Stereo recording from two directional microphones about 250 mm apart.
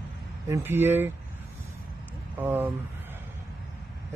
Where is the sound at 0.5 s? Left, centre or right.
Centre.